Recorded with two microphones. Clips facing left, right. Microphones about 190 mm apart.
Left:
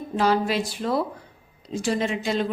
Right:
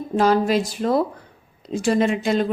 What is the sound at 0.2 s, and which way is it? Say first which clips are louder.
A woman's voice: right 4 dB; 45° right (ahead or behind).